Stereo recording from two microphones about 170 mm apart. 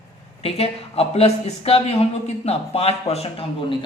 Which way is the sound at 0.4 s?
35° left (ahead or behind).